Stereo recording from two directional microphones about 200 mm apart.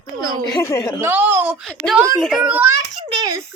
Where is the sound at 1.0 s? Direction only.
10° right (ahead or behind).